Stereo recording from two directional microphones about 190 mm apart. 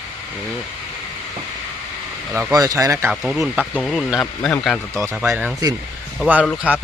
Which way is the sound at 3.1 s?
Centre (ahead or behind).